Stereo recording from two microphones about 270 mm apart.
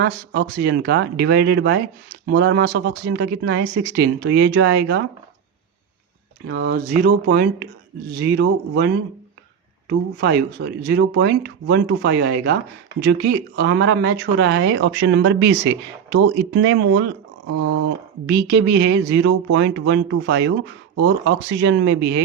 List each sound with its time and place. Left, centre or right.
0.0 s speech: right
6.5 s speech: right
10.6 s speech: right
18.3 s speech: right